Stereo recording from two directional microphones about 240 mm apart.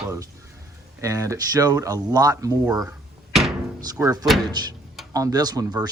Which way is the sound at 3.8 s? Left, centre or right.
Centre.